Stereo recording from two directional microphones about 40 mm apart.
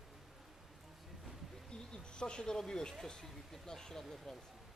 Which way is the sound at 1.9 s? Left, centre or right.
Left.